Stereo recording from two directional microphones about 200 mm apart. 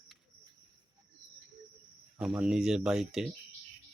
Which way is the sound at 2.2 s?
5° right (ahead or behind).